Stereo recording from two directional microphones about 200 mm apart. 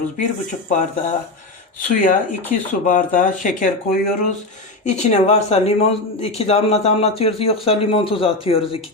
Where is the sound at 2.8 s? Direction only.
40° left (ahead or behind).